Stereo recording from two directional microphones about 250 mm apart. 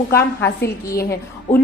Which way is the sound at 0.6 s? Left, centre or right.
Left.